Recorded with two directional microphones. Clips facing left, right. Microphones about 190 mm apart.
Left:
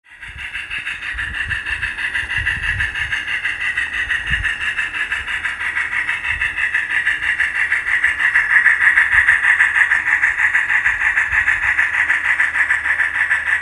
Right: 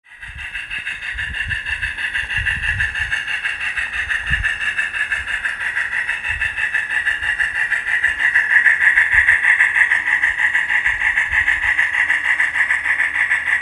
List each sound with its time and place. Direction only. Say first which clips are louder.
4.1 s vehicle: right 2 dB; 40° right (ahead or behind); by 13.6 s 15° right (ahead or behind)